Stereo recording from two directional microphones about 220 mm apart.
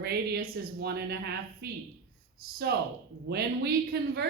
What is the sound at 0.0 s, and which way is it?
A woman's voice, 45° right (ahead or behind).